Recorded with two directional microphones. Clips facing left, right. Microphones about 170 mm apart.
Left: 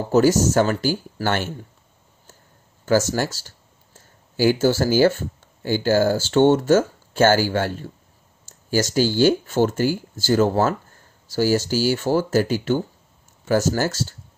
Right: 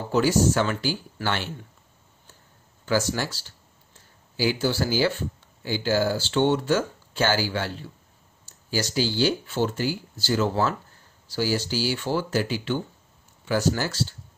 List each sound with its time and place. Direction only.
0.1 s speech: 45° left (ahead or behind)
2.8 s speech: 45° left (ahead or behind)